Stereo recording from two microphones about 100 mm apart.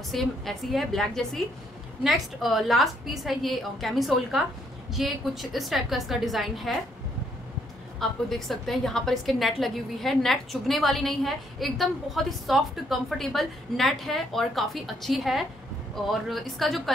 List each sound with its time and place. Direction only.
0.1 s a woman's voice: centre (ahead or behind)
8.0 s a woman's voice: centre (ahead or behind)